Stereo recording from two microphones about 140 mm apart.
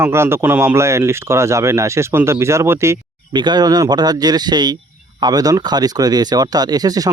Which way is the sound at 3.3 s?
30° right (ahead or behind).